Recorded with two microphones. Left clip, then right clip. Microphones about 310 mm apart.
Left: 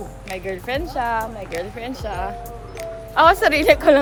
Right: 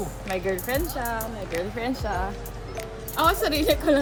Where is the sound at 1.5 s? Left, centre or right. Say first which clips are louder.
Even; centre.